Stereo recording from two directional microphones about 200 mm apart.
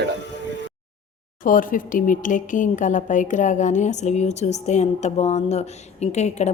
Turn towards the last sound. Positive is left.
turn(degrees=35)  # may be behind; listen again after turning